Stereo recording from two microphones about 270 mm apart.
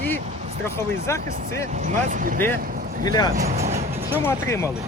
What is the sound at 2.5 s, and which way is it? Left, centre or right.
Vehicle, right.